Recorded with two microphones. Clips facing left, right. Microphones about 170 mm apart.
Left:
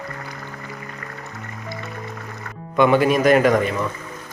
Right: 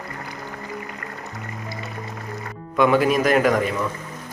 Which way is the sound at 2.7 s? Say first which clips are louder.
Left 2 dB; centre (ahead or behind).